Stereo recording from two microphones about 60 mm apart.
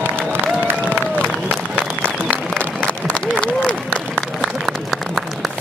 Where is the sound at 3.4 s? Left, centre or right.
Centre.